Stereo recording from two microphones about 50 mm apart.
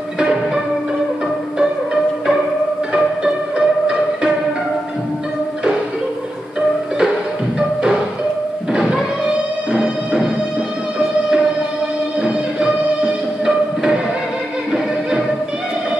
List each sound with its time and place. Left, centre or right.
3.5 s music: centre
9.7 s music: centre
12.2 s music: centre